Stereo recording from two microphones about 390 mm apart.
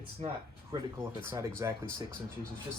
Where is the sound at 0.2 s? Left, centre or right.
Centre.